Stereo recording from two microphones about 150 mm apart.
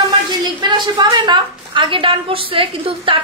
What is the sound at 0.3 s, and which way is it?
A woman's voice, 30° right (ahead or behind).